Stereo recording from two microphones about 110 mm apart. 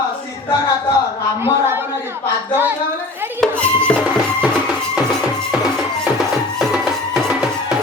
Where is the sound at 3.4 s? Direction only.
10° left (ahead or behind).